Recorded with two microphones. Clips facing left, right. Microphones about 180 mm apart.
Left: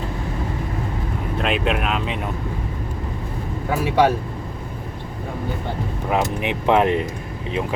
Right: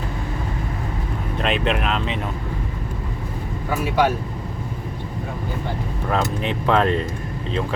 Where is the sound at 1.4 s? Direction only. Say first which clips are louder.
Even; 5° left (ahead or behind).